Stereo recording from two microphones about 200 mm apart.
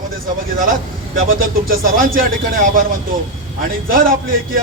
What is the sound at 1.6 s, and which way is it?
Speech, 45° right (ahead or behind).